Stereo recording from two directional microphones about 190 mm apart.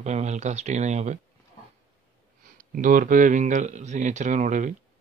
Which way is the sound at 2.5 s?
45° right (ahead or behind).